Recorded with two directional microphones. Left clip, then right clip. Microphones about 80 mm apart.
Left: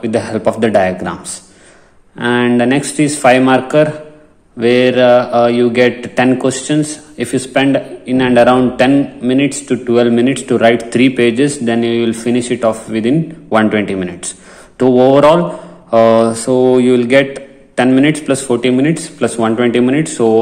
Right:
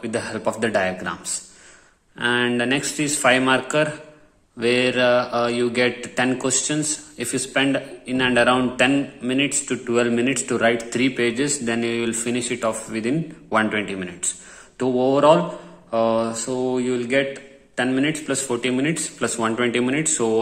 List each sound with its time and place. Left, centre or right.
0.0 s a man's voice: left